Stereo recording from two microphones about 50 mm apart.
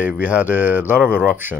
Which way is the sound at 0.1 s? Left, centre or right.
Right.